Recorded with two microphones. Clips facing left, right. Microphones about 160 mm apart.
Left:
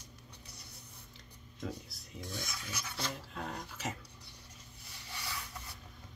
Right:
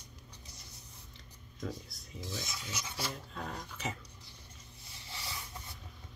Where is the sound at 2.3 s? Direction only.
20° right (ahead or behind).